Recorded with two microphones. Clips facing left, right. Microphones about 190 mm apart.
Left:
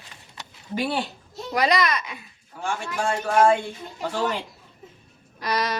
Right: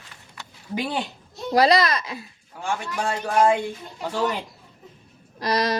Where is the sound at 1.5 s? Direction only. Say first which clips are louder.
Right 4 dB; 35° right (ahead or behind).